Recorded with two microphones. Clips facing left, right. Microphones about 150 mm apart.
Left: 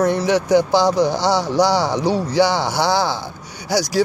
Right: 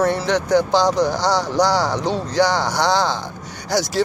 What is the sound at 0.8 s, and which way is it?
Speech, 15° right (ahead or behind).